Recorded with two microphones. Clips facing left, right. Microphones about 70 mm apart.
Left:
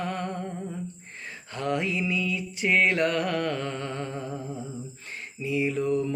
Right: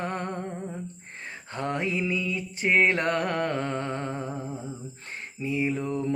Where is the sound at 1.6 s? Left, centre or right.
Right.